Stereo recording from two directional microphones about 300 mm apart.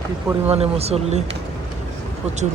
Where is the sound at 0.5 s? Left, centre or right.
Centre.